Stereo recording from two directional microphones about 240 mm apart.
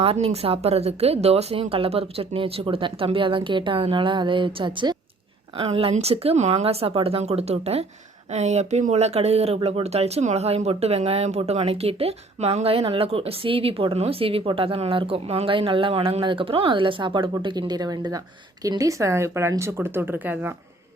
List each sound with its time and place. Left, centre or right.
0.0 s speech: right; by 20.6 s centre